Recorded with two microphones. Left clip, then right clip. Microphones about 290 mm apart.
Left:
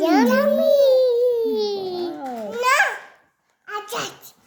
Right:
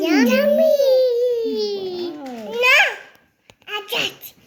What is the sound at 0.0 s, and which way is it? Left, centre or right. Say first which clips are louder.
Babbling: even; centre.